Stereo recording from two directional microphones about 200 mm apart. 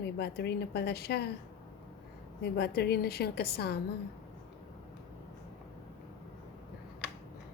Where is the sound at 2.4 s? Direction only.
55° left (ahead or behind).